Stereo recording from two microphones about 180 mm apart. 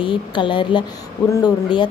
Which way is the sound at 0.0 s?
25° left (ahead or behind).